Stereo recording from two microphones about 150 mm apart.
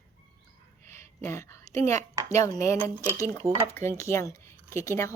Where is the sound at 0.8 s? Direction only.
15° left (ahead or behind).